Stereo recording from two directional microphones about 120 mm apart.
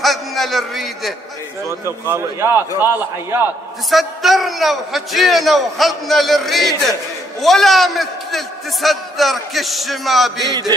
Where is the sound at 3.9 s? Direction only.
Centre (ahead or behind).